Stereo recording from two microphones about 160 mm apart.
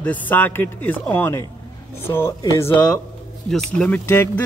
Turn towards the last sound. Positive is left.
turn(degrees=15)  # may be behind; listen again after turning